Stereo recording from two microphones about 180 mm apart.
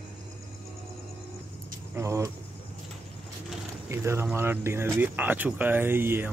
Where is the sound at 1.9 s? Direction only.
15° right (ahead or behind).